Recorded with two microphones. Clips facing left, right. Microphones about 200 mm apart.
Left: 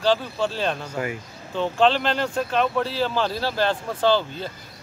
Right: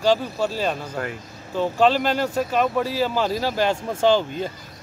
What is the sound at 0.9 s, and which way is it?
Speech, 5° left (ahead or behind).